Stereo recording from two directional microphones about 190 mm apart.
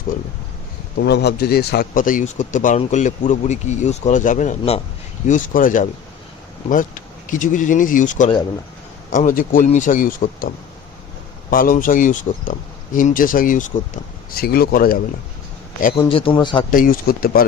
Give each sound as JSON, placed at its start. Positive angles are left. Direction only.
{"t": 0.9, "sound": "speech", "side_deg": 65}
{"t": 7.3, "sound": "speech", "side_deg": 45}
{"t": 11.5, "sound": "speech", "side_deg": 45}
{"t": 16.0, "sound": "a man's voice", "side_deg": 30}
{"t": 16.7, "sound": "speech", "side_deg": 45}